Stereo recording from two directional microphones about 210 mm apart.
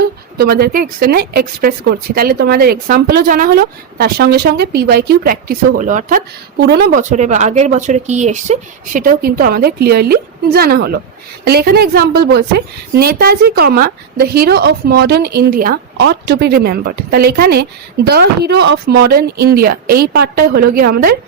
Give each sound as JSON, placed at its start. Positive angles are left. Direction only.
{"t": 0.3, "sound": "speech", "side_deg": -45}